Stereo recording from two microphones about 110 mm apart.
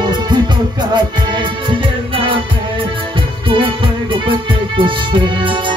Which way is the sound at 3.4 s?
55° right (ahead or behind).